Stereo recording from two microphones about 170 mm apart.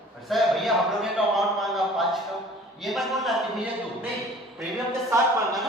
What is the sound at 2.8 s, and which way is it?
Speech, centre (ahead or behind).